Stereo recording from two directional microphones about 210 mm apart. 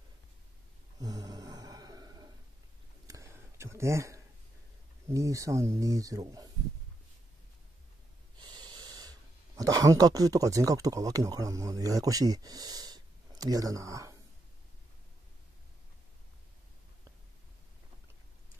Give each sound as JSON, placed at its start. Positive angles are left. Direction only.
{"t": 0.9, "sound": "a sound", "side_deg": -15}
{"t": 5.0, "sound": "speech", "side_deg": -15}
{"t": 8.4, "sound": "speech", "side_deg": -20}